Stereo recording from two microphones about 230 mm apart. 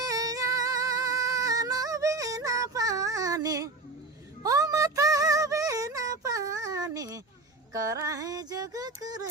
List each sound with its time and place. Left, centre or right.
0.0 s music: centre
4.4 s a sound: centre
7.7 s female singing: centre